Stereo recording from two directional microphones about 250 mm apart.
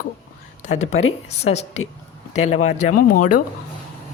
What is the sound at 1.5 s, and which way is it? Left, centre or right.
Speech, left.